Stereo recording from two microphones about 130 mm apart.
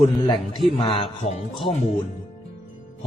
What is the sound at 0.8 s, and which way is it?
Speech, 45° left (ahead or behind).